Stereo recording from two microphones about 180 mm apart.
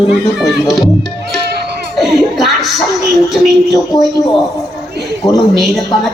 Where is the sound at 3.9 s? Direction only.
20° left (ahead or behind).